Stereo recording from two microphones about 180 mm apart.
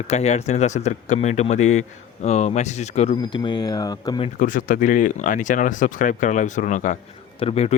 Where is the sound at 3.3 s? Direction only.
25° left (ahead or behind).